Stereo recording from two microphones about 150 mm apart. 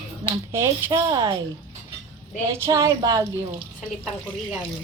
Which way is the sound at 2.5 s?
20° right (ahead or behind).